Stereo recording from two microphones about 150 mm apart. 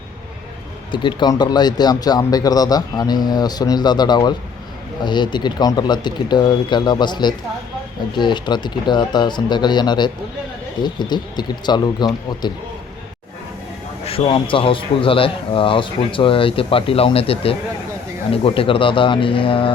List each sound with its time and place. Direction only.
0.9 s speech: 30° left (ahead or behind)
14.0 s speech: 35° left (ahead or behind)